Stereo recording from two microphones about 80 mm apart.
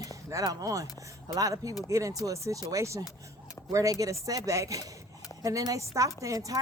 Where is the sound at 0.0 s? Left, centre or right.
Right.